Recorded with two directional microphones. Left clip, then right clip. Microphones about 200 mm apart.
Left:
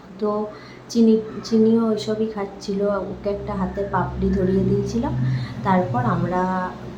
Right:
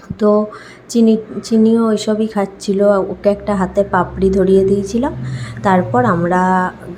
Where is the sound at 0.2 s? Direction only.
30° right (ahead or behind).